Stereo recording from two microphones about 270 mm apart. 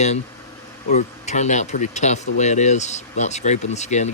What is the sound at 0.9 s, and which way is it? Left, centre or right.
Speech, left.